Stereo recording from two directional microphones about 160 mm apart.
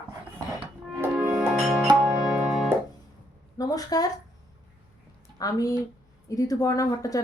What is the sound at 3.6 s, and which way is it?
Speech, 25° left (ahead or behind).